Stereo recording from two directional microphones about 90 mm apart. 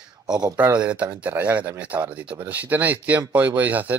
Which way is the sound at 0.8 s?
15° right (ahead or behind).